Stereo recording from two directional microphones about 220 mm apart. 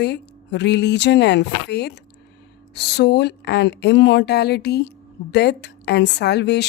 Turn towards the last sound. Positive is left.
turn(degrees=50)  # may be behind; listen again after turning